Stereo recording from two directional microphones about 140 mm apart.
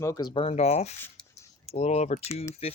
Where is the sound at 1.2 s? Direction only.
5° left (ahead or behind).